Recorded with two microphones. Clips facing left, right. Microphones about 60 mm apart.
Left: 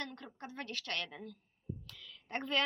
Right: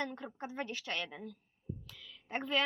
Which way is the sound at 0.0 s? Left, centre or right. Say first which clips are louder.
Right 5 dB; centre.